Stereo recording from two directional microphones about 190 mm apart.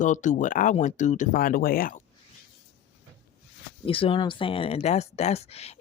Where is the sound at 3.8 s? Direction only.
30° left (ahead or behind).